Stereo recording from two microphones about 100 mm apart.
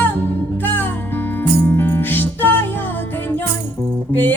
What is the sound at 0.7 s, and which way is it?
Music, 20° left (ahead or behind).